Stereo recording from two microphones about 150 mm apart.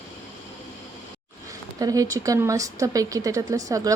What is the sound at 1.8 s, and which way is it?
A woman's voice, 25° right (ahead or behind).